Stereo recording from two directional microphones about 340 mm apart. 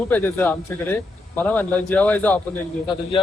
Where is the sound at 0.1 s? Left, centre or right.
Centre.